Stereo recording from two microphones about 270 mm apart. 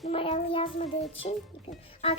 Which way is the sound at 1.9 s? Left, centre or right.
Left.